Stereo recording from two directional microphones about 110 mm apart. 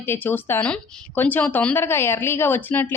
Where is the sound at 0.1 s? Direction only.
20° left (ahead or behind).